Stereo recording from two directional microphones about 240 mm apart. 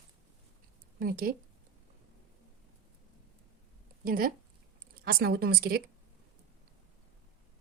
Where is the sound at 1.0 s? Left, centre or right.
Right.